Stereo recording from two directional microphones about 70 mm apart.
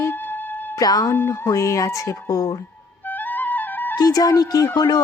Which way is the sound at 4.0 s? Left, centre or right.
Left.